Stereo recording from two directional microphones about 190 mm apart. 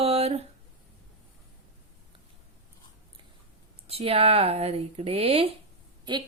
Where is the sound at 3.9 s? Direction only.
30° right (ahead or behind).